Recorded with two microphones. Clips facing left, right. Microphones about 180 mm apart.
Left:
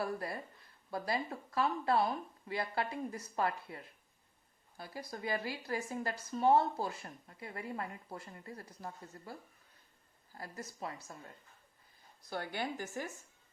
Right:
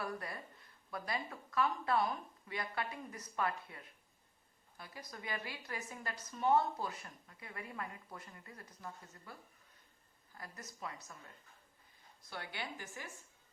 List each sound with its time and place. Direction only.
0.0 s speech: 30° left (ahead or behind)
4.8 s speech: 35° left (ahead or behind)
10.3 s speech: 30° left (ahead or behind)
12.3 s speech: 45° left (ahead or behind)